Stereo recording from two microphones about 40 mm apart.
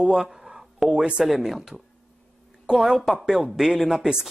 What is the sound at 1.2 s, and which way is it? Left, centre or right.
Speech, centre.